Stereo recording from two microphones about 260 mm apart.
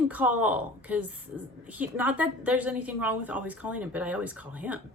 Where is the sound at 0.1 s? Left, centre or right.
Centre.